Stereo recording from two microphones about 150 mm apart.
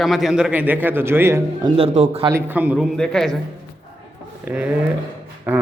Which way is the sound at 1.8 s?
40° right (ahead or behind).